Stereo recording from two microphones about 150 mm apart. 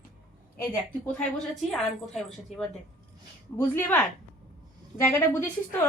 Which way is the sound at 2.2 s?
5° left (ahead or behind).